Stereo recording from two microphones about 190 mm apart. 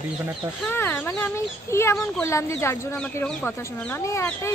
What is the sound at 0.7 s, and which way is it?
Speech, 10° left (ahead or behind).